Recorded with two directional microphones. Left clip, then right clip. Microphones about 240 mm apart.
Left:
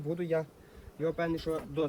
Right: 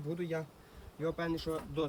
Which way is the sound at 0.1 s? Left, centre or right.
Centre.